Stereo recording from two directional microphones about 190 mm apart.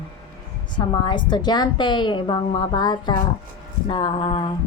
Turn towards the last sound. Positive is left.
turn(degrees=25)  # may be behind; listen again after turning